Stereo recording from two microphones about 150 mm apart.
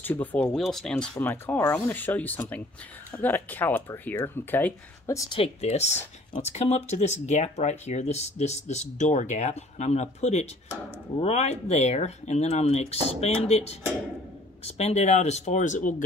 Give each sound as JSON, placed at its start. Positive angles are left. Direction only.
{"t": 0.0, "sound": "speech", "side_deg": 10}
{"t": 1.1, "sound": "speech", "side_deg": 15}
{"t": 5.4, "sound": "speech", "side_deg": 45}